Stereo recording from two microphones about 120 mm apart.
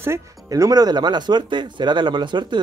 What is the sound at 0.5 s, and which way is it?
Speech, 30° right (ahead or behind).